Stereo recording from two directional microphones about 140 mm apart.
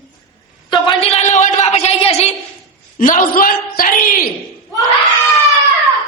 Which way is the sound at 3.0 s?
70° left (ahead or behind).